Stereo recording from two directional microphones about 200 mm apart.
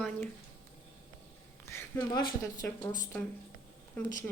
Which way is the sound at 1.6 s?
10° left (ahead or behind).